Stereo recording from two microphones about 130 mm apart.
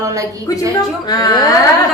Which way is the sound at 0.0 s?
25° right (ahead or behind).